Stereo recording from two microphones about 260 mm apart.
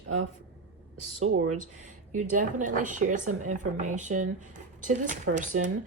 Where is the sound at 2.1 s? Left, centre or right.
Right.